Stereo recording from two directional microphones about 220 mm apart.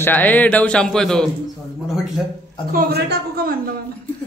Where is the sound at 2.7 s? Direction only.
45° right (ahead or behind).